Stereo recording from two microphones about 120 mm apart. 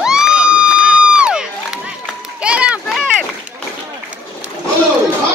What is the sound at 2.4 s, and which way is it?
Run, 10° right (ahead or behind).